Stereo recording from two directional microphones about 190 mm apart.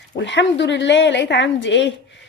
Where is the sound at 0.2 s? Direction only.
65° left (ahead or behind).